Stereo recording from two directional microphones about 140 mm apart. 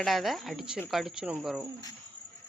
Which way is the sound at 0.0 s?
Centre (ahead or behind).